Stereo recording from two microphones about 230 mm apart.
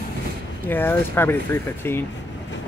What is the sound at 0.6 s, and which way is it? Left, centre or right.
Speech, centre.